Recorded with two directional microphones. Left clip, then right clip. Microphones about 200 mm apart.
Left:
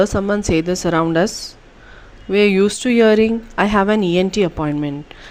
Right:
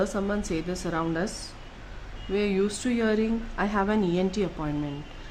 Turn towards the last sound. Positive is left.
turn(degrees=40)  # may be behind; listen again after turning